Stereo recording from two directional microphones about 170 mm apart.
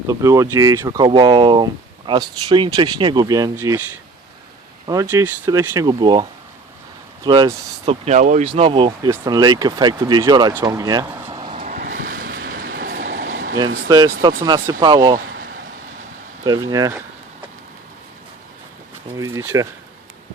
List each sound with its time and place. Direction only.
0.1 s speech: 20° right (ahead or behind)
4.9 s speech: 15° right (ahead or behind)
7.3 s speech: 25° right (ahead or behind)
8.0 s speech: 45° right (ahead or behind)
8.4 s speech: 35° right (ahead or behind)
11.5 s vehicle: 50° right (ahead or behind); by 13.6 s 80° right
13.8 s speech: 25° right (ahead or behind)
16.4 s speech: 20° right (ahead or behind)
19.1 s speech: 20° right (ahead or behind)